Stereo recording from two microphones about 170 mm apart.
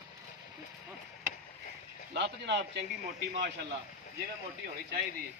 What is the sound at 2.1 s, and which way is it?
Speech, 90° right.